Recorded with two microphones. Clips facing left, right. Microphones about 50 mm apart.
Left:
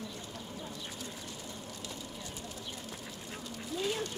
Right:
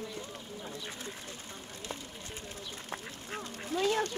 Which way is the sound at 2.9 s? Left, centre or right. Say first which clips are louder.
Right 3 dB; right.